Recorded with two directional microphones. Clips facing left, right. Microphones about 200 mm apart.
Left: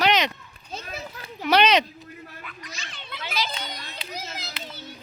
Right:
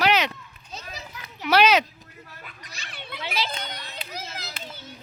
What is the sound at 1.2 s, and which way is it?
Children playing, 35° left (ahead or behind).